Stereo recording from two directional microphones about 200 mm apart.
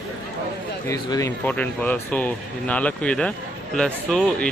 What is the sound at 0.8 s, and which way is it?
A man's voice, 15° left (ahead or behind).